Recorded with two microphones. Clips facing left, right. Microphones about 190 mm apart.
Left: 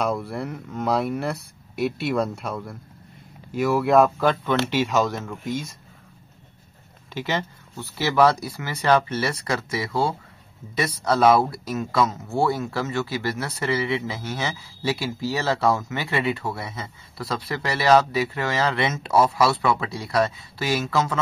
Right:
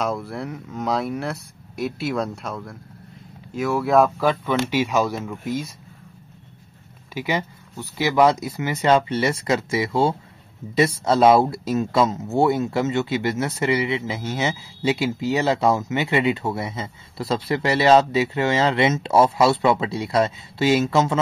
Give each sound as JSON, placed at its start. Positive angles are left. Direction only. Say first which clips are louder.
{"t": 0.0, "sound": "speech", "louder": "even", "side_deg": 0}
{"t": 7.2, "sound": "speech", "louder": "right 2 dB", "side_deg": -10}